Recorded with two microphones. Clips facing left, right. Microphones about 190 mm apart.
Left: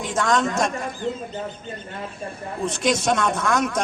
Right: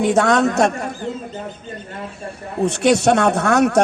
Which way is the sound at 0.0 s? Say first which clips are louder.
Right 7 dB; 65° right (ahead or behind).